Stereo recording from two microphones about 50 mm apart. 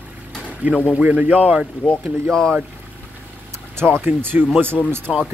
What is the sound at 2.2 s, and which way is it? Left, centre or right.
Speech, centre.